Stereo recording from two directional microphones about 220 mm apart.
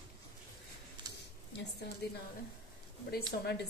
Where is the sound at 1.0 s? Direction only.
20° right (ahead or behind).